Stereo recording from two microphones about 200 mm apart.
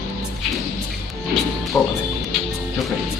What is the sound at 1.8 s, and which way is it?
Speech, 5° left (ahead or behind).